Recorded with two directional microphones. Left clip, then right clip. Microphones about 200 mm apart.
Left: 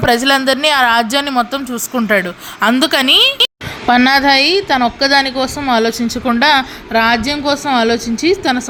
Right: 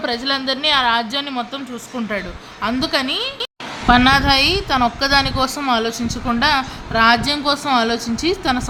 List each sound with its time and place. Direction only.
0.0 s a woman's voice: 35° left (ahead or behind); by 5.7 s 10° left (ahead or behind)
5.7 s a woman's voice: 25° left (ahead or behind)